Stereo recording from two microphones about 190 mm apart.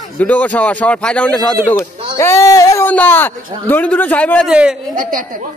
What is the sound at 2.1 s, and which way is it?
A man's voice, 15° left (ahead or behind).